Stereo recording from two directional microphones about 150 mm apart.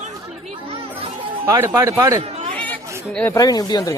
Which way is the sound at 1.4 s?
20° right (ahead or behind).